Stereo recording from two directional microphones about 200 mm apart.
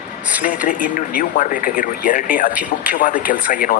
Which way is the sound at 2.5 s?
5° right (ahead or behind).